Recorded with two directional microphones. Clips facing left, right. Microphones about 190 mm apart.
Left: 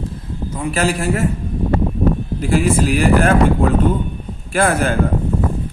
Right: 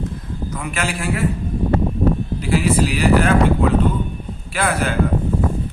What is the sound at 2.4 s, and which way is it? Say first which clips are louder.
A man's voice: left 2 dB; 50° left (ahead or behind).